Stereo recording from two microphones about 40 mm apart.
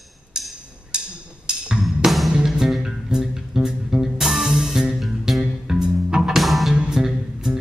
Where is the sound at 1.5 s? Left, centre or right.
Right.